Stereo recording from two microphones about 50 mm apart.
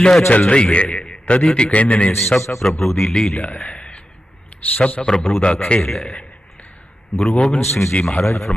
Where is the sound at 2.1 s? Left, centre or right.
Left.